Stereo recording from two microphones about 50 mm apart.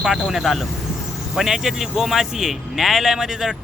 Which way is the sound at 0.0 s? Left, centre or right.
Centre.